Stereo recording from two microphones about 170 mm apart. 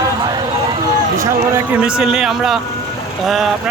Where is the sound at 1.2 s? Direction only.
15° right (ahead or behind).